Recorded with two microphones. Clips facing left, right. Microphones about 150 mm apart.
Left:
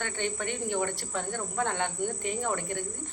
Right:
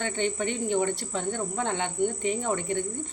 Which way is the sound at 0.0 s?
20° right (ahead or behind).